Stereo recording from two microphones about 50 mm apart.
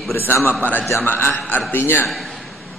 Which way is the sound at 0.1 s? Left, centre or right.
Left.